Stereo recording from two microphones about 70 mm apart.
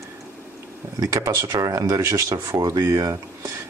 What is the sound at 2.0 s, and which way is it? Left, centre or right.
Speech, right.